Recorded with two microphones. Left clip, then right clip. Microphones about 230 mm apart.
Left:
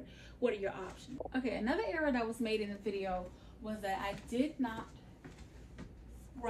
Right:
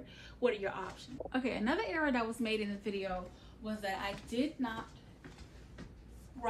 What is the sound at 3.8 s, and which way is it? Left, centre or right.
Speech, right.